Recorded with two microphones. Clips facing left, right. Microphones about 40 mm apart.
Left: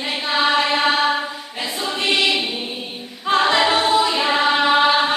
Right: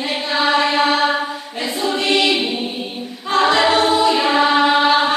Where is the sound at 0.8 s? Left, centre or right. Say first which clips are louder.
Right 2 dB; centre.